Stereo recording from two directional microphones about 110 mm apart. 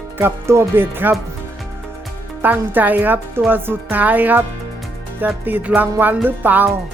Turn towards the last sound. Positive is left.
turn(degrees=-15)  # may be behind; listen again after turning